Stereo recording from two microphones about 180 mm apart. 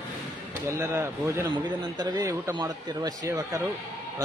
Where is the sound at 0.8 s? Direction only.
15° right (ahead or behind).